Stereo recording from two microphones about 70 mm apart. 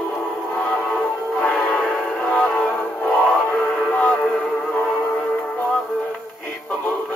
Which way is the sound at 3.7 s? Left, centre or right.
Centre.